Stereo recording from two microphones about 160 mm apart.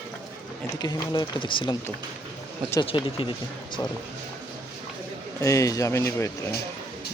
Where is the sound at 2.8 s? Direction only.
35° left (ahead or behind).